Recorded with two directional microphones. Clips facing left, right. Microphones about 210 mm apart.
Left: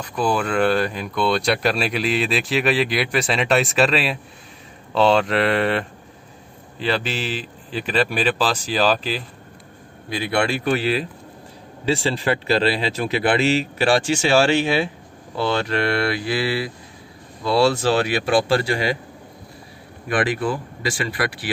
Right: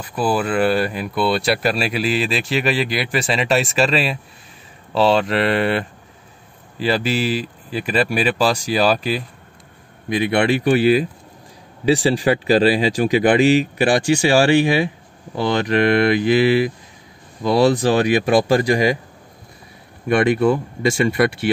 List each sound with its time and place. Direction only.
0.0 s speech: 5° right (ahead or behind)
20.1 s speech: 25° right (ahead or behind)